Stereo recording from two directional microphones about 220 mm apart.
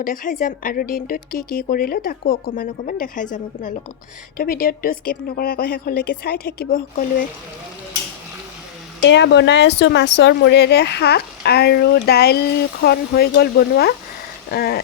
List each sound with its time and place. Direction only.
0.0 s speech: 40° left (ahead or behind)
9.0 s speech: 55° left (ahead or behind)